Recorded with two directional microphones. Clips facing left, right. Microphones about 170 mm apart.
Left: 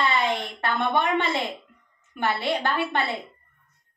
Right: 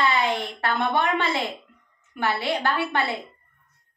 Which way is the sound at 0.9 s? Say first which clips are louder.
Even; 20° left (ahead or behind).